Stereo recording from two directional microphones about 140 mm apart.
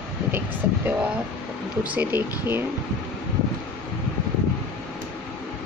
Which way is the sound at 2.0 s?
15° right (ahead or behind).